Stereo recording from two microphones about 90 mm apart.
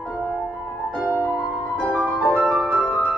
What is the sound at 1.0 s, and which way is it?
Music, 20° right (ahead or behind).